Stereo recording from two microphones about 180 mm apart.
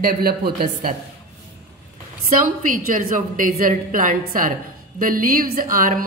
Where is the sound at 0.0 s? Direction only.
55° right (ahead or behind).